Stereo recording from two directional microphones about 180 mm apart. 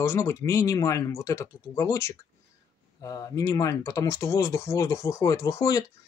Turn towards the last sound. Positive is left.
turn(degrees=15)  # may be behind; listen again after turning